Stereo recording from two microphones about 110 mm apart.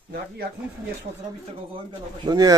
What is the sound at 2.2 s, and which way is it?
Speech, 35° right (ahead or behind).